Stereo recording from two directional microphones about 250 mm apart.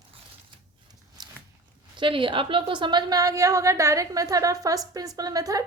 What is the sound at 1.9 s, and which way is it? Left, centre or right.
A woman's voice, centre.